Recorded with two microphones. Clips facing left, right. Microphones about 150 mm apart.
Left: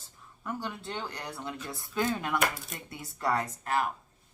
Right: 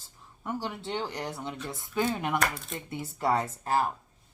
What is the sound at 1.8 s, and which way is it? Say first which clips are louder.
Speech: right 2 dB; 20° right (ahead or behind).